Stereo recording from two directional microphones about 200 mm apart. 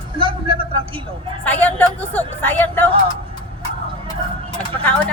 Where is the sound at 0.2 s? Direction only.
25° right (ahead or behind).